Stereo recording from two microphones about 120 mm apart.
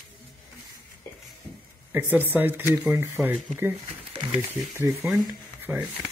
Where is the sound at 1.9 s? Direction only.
15° right (ahead or behind).